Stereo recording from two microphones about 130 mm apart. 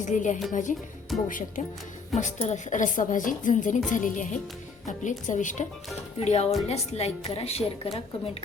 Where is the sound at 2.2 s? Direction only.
60° left (ahead or behind).